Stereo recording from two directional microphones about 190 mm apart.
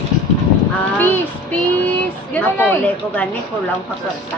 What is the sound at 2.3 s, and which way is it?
Speech, 10° left (ahead or behind).